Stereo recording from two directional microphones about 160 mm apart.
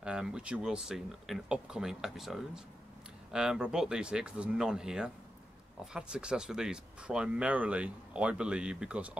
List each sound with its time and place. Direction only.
0.0 s speech: 5° right (ahead or behind)